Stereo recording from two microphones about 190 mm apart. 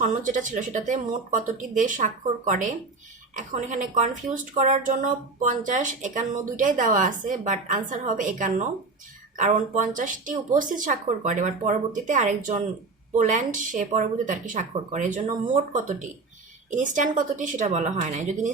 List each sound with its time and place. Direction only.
0.0 s a woman's voice: 40° right (ahead or behind)